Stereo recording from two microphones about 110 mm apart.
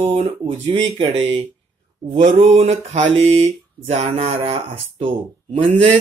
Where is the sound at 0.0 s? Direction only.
75° right (ahead or behind).